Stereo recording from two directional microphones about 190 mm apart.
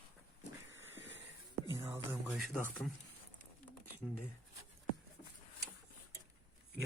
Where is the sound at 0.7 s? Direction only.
75° right (ahead or behind).